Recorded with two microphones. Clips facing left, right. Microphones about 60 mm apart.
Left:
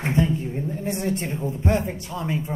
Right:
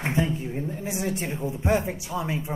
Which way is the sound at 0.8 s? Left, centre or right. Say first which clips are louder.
Left 4 dB; centre.